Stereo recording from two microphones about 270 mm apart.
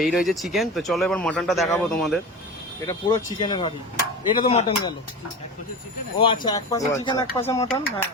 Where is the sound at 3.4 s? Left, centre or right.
Centre.